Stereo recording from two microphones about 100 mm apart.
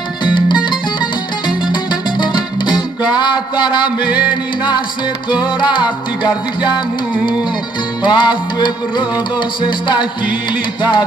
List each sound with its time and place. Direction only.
0.2 s music: 50° left (ahead or behind)
1.7 s music: 50° left (ahead or behind)
5.6 s music: 50° left (ahead or behind)
8.0 s music: 50° left (ahead or behind)